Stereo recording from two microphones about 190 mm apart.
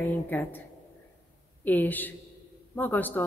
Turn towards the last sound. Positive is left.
turn(degrees=10)  # may be behind; listen again after turning